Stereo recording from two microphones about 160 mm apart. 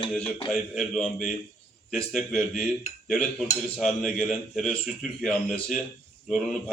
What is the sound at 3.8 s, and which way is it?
A man's voice, centre (ahead or behind).